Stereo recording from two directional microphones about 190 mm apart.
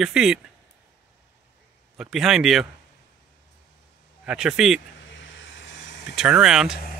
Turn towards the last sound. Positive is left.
turn(degrees=-5)  # may be behind; listen again after turning